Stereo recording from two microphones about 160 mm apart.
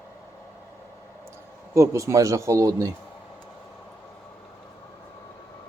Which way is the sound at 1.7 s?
20° right (ahead or behind).